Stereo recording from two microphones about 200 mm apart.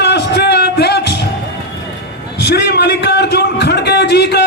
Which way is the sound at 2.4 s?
55° left (ahead or behind).